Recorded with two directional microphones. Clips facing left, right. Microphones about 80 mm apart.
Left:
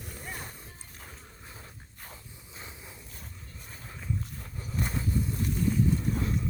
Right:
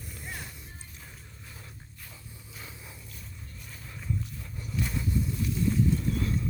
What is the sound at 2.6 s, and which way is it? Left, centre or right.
Vehicle, left.